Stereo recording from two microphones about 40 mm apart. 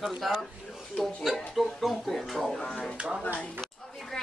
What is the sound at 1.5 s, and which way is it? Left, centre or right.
A woman's voice, centre.